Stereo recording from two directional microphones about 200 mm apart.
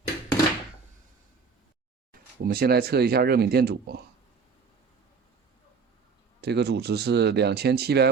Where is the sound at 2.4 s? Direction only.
50° right (ahead or behind).